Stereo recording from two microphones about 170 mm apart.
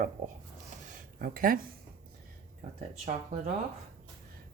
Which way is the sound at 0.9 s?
55° right (ahead or behind).